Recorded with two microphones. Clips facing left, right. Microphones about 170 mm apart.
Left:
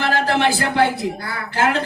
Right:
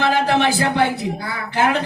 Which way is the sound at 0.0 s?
20° right (ahead or behind).